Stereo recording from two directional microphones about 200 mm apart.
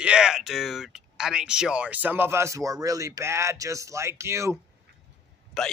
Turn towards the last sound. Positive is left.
turn(degrees=5)  # may be behind; listen again after turning